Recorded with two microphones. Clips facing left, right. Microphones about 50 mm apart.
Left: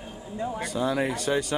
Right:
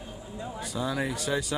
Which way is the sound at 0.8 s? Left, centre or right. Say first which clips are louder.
Left 4 dB; centre.